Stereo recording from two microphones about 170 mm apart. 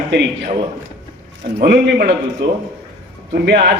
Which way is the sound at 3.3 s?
75° right (ahead or behind).